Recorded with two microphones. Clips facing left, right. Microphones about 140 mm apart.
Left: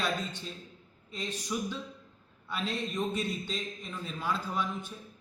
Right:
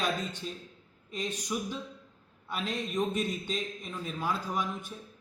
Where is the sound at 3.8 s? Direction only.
10° right (ahead or behind).